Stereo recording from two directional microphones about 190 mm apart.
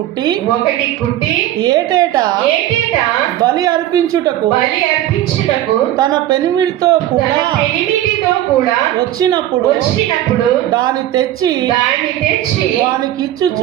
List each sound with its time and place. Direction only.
1.6 s speech: 20° right (ahead or behind)
3.4 s speech: 20° right (ahead or behind)
6.0 s speech: 20° right (ahead or behind)
10.8 s speech: 20° right (ahead or behind)